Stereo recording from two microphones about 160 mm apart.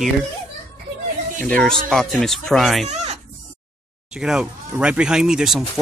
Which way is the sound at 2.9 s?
45° right (ahead or behind).